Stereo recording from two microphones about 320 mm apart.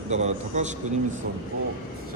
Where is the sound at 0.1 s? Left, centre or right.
Right.